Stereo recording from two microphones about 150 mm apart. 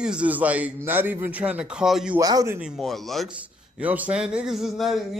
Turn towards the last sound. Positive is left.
turn(degrees=0)  # may be behind; listen again after turning